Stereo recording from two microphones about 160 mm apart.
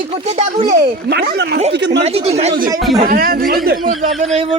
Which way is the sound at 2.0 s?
40° right (ahead or behind).